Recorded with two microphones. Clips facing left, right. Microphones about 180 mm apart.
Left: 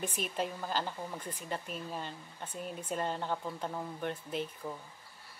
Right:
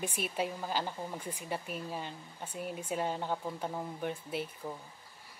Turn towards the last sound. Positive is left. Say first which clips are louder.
# even
turn(degrees=-10)  # may be behind; listen again after turning